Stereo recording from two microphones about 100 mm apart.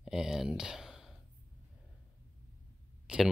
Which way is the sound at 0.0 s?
5° right (ahead or behind).